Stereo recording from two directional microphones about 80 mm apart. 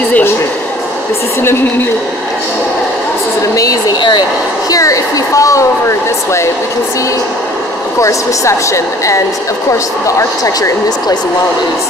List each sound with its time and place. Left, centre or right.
4.6 s speech: left
8.0 s a woman's voice: left